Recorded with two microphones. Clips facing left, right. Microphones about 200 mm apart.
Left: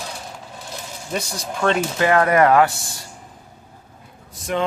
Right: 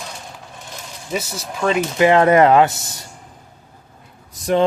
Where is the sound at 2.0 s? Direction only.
20° right (ahead or behind).